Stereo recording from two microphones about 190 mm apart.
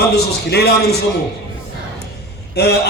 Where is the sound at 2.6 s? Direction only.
60° left (ahead or behind).